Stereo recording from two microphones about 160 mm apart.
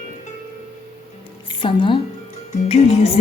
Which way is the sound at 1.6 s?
30° left (ahead or behind).